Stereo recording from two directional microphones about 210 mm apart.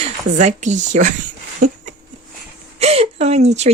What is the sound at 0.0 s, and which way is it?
Speech, 35° right (ahead or behind).